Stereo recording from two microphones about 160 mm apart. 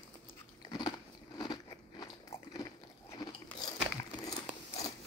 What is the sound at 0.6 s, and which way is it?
Biting, 25° left (ahead or behind).